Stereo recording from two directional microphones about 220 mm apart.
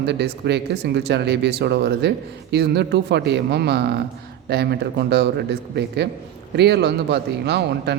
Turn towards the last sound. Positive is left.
turn(degrees=-50)  # may be behind; listen again after turning